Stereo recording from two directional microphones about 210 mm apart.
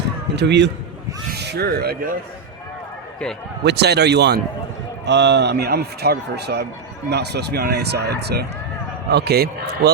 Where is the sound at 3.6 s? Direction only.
50° right (ahead or behind).